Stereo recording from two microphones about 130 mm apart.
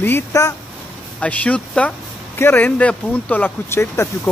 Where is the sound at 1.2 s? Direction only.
10° left (ahead or behind).